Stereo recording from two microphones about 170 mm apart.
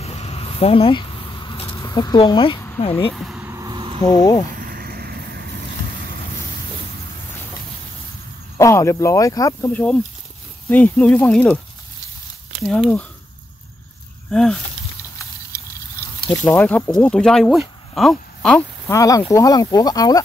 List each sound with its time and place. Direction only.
0.0 s a sound: 40° left (ahead or behind)
1.8 s speech: 20° left (ahead or behind)
3.1 s a sound: centre (ahead or behind)
3.5 s a sound: 25° right (ahead or behind)
4.0 s speech: 25° left (ahead or behind)
4.6 s boat: 60° right (ahead or behind); by 6.1 s 80° right
8.5 s speech: 15° left (ahead or behind)
9.7 s speech: 5° left (ahead or behind)
12.6 s speech: 5° left (ahead or behind)
14.3 s speech: 5° left (ahead or behind)
16.3 s speech: 15° left (ahead or behind)
18.9 s speech: 20° left (ahead or behind)